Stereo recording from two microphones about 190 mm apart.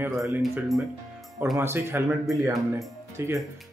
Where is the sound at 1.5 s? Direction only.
15° right (ahead or behind).